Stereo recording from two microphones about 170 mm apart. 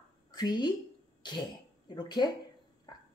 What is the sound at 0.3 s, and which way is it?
Speech, 25° left (ahead or behind).